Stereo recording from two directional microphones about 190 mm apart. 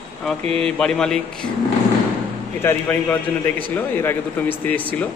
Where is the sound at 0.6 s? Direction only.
5° left (ahead or behind).